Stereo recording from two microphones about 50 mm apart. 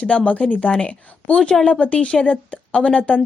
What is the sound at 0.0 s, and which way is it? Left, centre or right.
A woman's voice, left.